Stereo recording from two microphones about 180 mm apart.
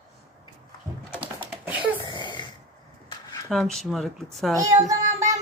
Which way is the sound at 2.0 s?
25° left (ahead or behind).